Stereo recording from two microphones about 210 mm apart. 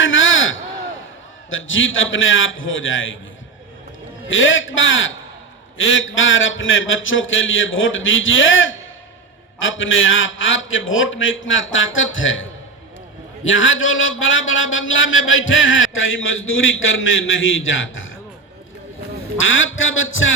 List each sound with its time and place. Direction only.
0.0 s a sound: 65° left (ahead or behind)
1.5 s a man's voice: 65° left (ahead or behind)
4.3 s a man's voice: 65° left (ahead or behind)
19.4 s a man's voice: 65° left (ahead or behind)